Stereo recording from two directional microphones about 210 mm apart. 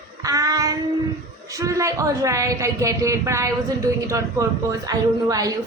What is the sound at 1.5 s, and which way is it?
A man's voice, 15° right (ahead or behind).